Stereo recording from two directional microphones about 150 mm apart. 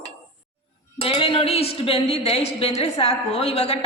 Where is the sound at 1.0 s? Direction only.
35° left (ahead or behind).